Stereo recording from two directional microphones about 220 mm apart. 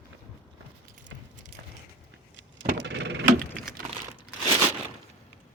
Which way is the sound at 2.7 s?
55° right (ahead or behind).